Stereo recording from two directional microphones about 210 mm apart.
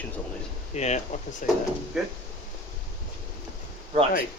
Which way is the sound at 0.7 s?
30° left (ahead or behind).